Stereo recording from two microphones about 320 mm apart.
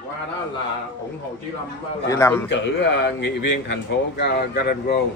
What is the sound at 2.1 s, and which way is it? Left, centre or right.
Speech, centre.